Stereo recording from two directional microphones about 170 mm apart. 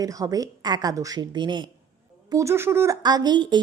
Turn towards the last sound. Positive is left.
turn(degrees=-25)  # may be behind; listen again after turning